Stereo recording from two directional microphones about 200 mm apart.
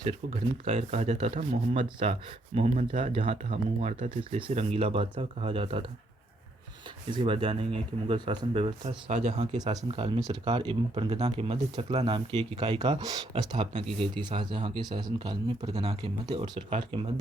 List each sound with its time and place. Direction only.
0.6 s speech: 30° right (ahead or behind)
7.1 s speech: 25° right (ahead or behind)